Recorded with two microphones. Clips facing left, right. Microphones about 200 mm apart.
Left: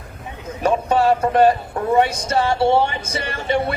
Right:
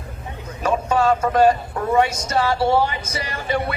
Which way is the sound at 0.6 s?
35° left (ahead or behind).